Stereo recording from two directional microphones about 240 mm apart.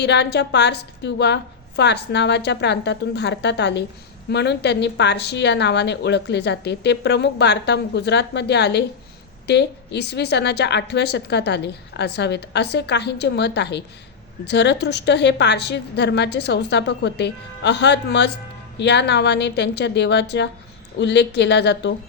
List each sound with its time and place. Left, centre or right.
0.0 s speech: left